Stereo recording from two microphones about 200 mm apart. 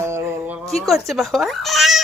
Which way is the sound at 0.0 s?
15° right (ahead or behind).